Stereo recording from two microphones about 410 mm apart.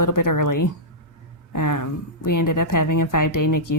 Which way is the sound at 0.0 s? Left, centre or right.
Left.